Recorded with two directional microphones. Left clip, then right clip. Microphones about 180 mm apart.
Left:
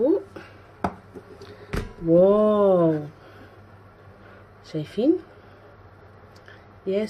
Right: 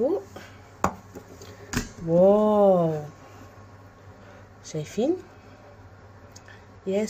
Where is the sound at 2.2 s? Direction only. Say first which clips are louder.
Even; 25° left (ahead or behind).